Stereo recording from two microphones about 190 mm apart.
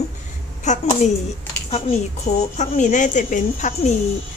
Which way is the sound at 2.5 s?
40° left (ahead or behind).